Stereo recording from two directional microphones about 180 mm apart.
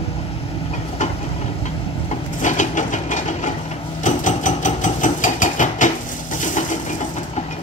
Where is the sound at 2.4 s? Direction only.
45° left (ahead or behind).